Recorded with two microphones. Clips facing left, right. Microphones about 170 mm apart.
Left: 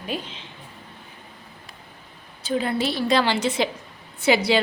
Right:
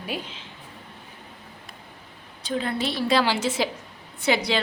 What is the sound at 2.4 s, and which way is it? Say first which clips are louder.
A woman's voice: left 3 dB; 5° left (ahead or behind).